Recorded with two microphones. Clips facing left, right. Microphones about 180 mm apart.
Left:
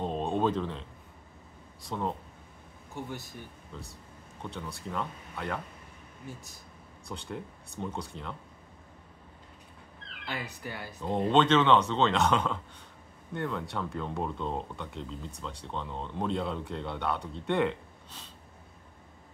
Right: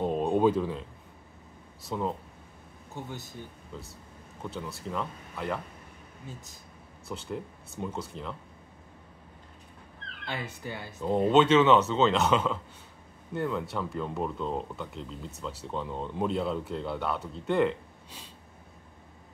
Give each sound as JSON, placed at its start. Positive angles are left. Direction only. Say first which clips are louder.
{"t": 0.0, "sound": "a sound", "louder": "right 4 dB", "side_deg": -10}
{"t": 1.8, "sound": "speech", "louder": "right 2 dB", "side_deg": -5}
{"t": 2.9, "sound": "speech", "louder": "left 1 dB", "side_deg": -20}
{"t": 4.4, "sound": "speech", "louder": "right 2 dB", "side_deg": -5}
{"t": 6.2, "sound": "speech", "louder": "left 1 dB", "side_deg": -20}
{"t": 7.1, "sound": "speech", "louder": "right 3 dB", "side_deg": -5}
{"t": 10.2, "sound": "speech", "louder": "right 1 dB", "side_deg": -25}
{"t": 11.0, "sound": "speech", "louder": "right 3 dB", "side_deg": -5}